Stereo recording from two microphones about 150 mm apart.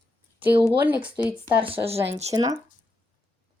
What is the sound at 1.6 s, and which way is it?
Speech, 40° right (ahead or behind).